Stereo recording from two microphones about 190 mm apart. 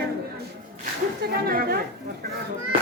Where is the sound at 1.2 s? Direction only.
50° right (ahead or behind).